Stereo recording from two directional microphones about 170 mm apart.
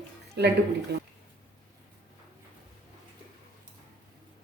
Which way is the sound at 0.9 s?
75° right (ahead or behind).